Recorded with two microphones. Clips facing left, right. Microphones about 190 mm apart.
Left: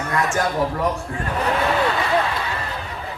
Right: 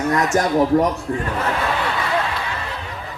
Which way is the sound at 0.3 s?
40° right (ahead or behind).